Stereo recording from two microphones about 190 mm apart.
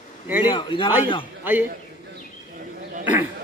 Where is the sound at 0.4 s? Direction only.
25° left (ahead or behind).